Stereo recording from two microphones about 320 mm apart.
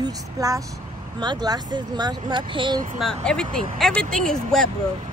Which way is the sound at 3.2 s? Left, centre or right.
Centre.